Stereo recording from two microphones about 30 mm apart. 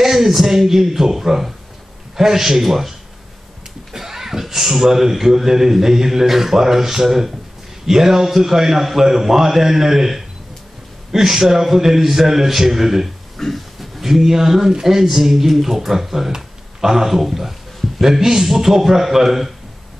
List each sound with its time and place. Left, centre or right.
0.0 s a man's voice: centre
3.9 s a man's voice: centre
13.4 s a sound: centre
13.7 s a man's voice: centre